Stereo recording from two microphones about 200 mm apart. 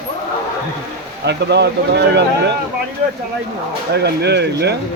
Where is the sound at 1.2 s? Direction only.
55° right (ahead or behind).